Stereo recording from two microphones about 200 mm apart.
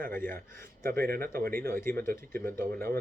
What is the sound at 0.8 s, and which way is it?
Speech, 50° right (ahead or behind).